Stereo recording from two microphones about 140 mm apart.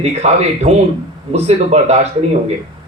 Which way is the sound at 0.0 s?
50° right (ahead or behind).